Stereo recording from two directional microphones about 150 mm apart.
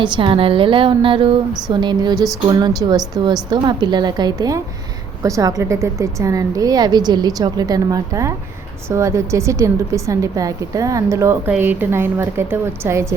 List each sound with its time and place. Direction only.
0.0 s a woman's voice: 35° right (ahead or behind)
2.1 s speech: centre (ahead or behind)
2.5 s a woman's voice: 30° right (ahead or behind)